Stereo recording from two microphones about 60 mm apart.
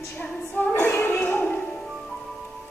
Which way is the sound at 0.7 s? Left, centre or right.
Left.